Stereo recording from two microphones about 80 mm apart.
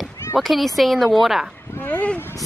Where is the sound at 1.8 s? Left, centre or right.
Centre.